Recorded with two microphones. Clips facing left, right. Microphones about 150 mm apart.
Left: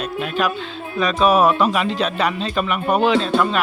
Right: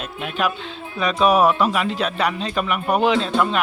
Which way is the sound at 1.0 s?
10° right (ahead or behind).